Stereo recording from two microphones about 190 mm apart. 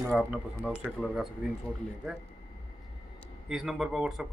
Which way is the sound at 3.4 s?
5° right (ahead or behind).